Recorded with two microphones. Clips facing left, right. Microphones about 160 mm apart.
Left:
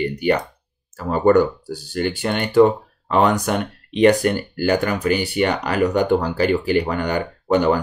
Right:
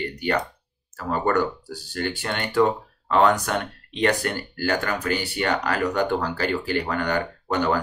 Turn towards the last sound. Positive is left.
turn(degrees=15)  # may be behind; listen again after turning